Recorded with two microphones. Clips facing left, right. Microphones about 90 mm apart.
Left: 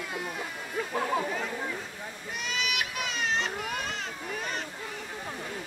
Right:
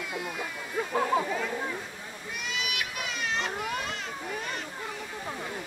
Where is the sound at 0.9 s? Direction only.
25° right (ahead or behind).